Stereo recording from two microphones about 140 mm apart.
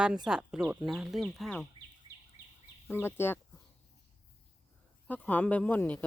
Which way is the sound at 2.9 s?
15° left (ahead or behind).